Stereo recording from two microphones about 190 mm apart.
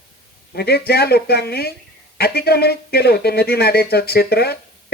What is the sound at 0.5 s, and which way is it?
Speech, 55° left (ahead or behind).